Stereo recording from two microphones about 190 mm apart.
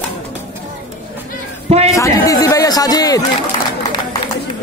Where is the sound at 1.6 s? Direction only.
35° right (ahead or behind).